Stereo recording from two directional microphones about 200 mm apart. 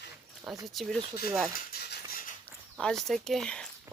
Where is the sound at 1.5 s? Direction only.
45° left (ahead or behind).